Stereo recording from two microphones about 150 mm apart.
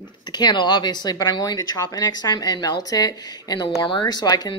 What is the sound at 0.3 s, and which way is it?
Speech, 30° left (ahead or behind).